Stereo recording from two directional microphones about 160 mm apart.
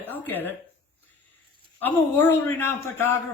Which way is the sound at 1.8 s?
10° left (ahead or behind).